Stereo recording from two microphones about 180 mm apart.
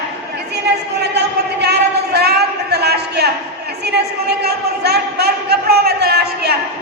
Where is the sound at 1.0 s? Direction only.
70° right (ahead or behind).